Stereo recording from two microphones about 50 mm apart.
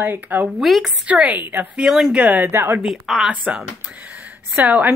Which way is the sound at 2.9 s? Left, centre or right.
Centre.